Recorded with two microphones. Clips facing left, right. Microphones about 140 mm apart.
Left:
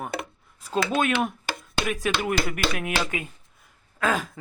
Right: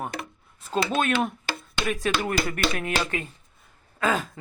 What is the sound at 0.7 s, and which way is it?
Speech, 10° left (ahead or behind).